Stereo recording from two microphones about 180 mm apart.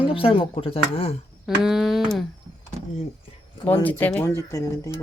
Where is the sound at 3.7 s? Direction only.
10° left (ahead or behind).